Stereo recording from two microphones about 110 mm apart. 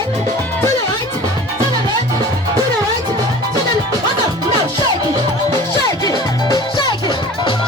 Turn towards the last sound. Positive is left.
turn(degrees=45)  # may be behind; listen again after turning